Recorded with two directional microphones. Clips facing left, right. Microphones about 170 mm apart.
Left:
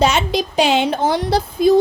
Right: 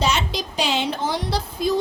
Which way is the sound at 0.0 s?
55° left (ahead or behind).